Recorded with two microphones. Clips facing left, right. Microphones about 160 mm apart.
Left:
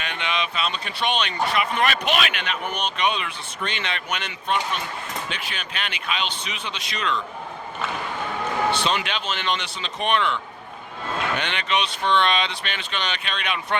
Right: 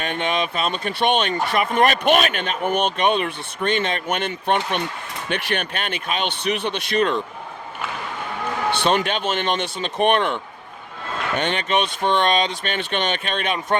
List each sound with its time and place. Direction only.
0.0 s speech: 45° right (ahead or behind); by 5.6 s 65° right (ahead or behind)
5.7 s speech: 50° right (ahead or behind)
8.7 s speech: 55° right (ahead or behind)